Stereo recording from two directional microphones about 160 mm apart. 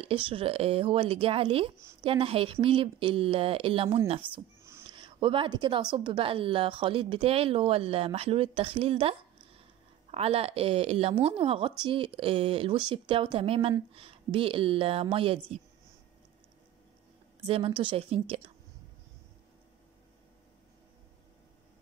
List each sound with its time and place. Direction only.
0.0 s a woman's voice: 35° right (ahead or behind)
4.2 s a sound: 15° right (ahead or behind)
4.9 s a woman's voice: 30° right (ahead or behind)
17.5 s a woman's voice: 35° right (ahead or behind)